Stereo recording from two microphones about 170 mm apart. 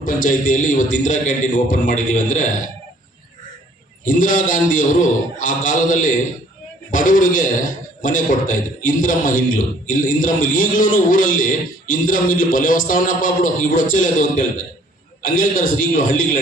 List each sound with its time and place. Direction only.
0.0 s a man's voice: 50° left (ahead or behind)
4.0 s a man's voice: 50° left (ahead or behind)